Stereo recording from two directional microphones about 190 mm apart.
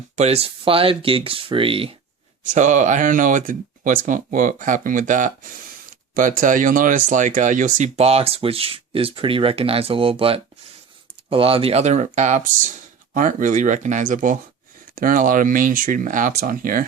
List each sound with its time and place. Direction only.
0.2 s speech: 35° right (ahead or behind)
2.5 s speech: 40° right (ahead or behind)